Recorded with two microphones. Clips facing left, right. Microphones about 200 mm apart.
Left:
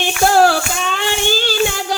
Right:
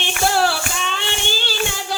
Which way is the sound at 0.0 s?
45° left (ahead or behind).